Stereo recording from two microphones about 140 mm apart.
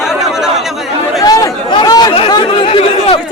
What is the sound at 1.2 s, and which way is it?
Speech, 25° left (ahead or behind).